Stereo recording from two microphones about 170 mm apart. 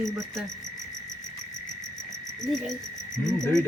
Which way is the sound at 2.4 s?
5° left (ahead or behind).